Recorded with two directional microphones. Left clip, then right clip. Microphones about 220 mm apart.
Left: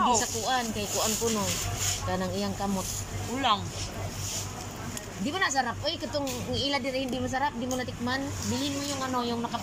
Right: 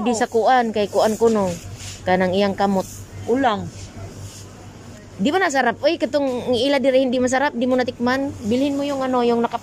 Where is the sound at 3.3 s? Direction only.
50° right (ahead or behind).